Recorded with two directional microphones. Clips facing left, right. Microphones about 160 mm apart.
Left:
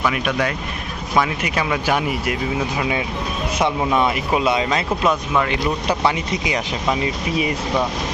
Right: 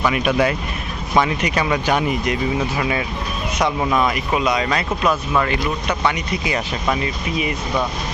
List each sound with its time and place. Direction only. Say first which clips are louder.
0.0 s speech: right 3 dB; 5° right (ahead or behind)
1.1 s speech: right 2 dB; 5° left (ahead or behind)
3.9 s speech: left 1 dB; 25° left (ahead or behind)
6.4 s speech: right 2 dB; 15° left (ahead or behind)